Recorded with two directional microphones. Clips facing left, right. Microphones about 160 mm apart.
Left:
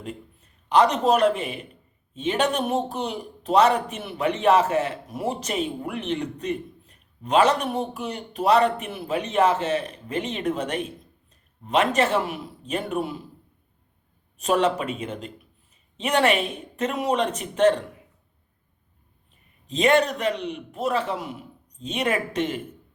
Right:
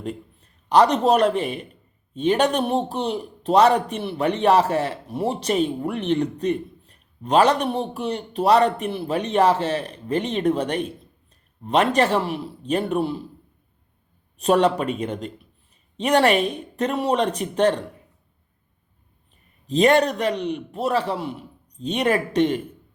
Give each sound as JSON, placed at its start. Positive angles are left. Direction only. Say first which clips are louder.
{"t": 0.7, "sound": "speech", "louder": "right 2 dB", "side_deg": -35}
{"t": 14.3, "sound": "speech", "louder": "right 4 dB", "side_deg": -35}
{"t": 19.6, "sound": "speech", "louder": "right 3 dB", "side_deg": -35}